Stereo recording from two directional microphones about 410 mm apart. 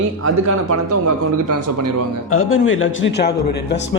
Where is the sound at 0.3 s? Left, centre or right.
Right.